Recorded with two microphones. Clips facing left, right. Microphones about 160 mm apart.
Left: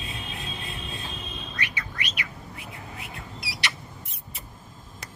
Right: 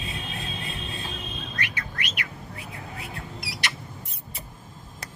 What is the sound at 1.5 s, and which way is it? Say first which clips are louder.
Bird: even; 45° right (ahead or behind).